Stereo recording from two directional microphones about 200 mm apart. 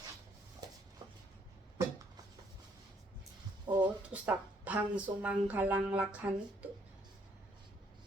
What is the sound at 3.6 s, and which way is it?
Speech, 20° right (ahead or behind).